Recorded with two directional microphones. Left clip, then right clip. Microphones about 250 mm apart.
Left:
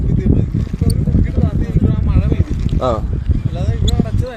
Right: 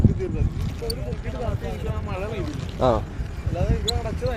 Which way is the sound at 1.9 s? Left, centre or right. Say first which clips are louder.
Left 7 dB; left.